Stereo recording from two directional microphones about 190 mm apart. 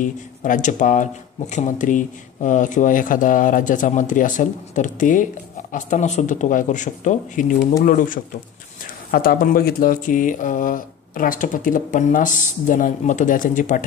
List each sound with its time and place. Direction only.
0.0 s speech: 40° left (ahead or behind)